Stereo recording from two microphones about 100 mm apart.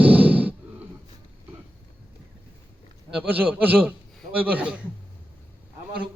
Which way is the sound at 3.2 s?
15° right (ahead or behind).